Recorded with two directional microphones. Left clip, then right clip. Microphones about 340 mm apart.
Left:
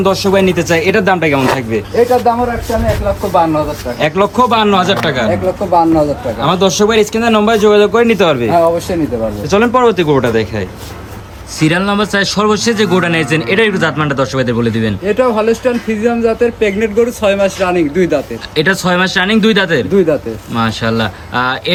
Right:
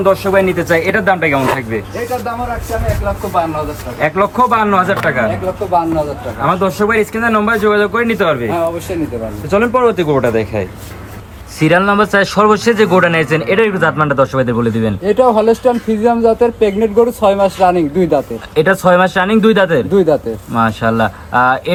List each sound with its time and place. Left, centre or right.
0.0 s a man's voice: centre
6.4 s a man's voice: centre
9.5 s a man's voice: centre
15.0 s speech: centre
18.5 s a man's voice: centre
19.9 s speech: centre
20.5 s a man's voice: centre